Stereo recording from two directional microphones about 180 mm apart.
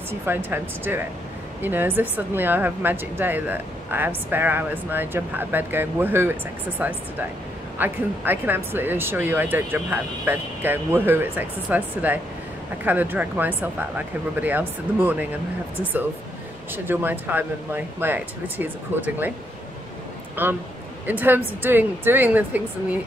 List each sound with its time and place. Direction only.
0.1 s speech: 10° right (ahead or behind)
20.4 s speech: 10° right (ahead or behind)